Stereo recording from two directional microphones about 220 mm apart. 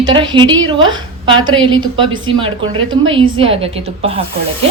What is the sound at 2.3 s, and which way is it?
A woman's voice, 25° right (ahead or behind).